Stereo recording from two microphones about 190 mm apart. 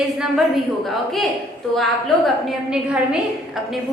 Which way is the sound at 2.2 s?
5° right (ahead or behind).